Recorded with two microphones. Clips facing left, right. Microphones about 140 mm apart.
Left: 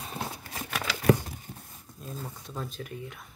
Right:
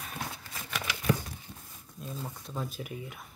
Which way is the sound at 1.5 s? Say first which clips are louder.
Left 4 dB; 30° left (ahead or behind).